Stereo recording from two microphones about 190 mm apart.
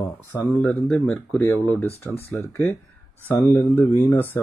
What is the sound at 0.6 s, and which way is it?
Speech, 5° left (ahead or behind).